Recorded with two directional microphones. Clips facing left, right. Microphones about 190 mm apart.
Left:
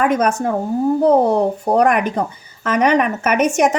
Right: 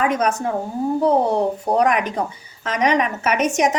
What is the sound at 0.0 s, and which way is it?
Speech, 50° left (ahead or behind).